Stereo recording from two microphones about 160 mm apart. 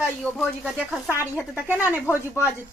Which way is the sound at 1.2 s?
10° right (ahead or behind).